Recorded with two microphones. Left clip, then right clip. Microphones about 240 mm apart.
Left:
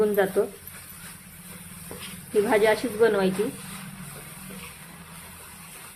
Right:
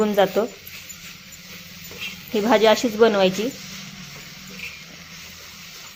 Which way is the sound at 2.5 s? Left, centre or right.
Centre.